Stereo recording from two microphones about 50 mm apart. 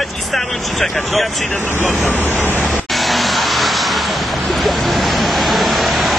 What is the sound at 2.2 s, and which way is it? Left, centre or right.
Vehicle, left.